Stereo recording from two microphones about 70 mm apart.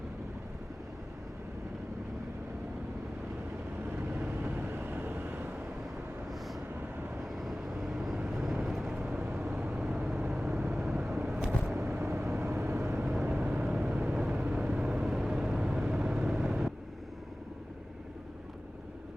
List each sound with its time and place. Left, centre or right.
3.8 s vehicle: right
6.7 s vehicle: right
7.2 s vehicle: centre
9.0 s vehicle: right
9.2 s vehicle: right
10.2 s vehicle: centre
11.7 s vehicle: right
13.1 s vehicle: centre